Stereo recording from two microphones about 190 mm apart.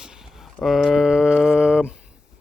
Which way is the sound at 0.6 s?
Centre (ahead or behind).